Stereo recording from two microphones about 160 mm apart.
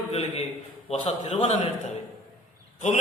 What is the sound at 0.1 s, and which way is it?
A man's voice, 40° left (ahead or behind).